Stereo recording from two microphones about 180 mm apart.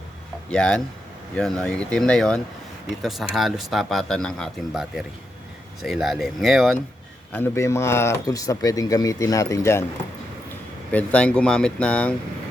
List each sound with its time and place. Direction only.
0.5 s speech: 5° left (ahead or behind)
7.3 s speech: 15° left (ahead or behind)
10.9 s speech: 5° left (ahead or behind)